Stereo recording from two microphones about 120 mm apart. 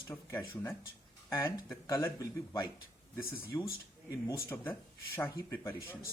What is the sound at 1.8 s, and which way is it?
Speech, 30° left (ahead or behind).